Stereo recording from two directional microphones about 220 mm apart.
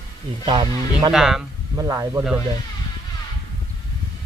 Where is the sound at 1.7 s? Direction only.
15° right (ahead or behind).